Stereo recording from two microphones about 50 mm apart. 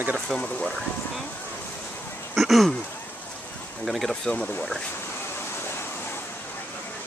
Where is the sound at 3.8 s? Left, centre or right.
Centre.